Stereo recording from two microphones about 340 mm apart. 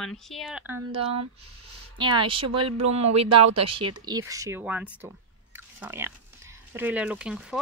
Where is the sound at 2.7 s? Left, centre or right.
Right.